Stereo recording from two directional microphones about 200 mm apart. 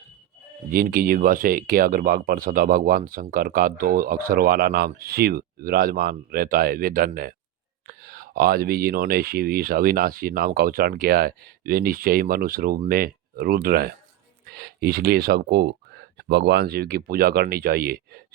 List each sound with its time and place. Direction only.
0.7 s speech: 45° right (ahead or behind)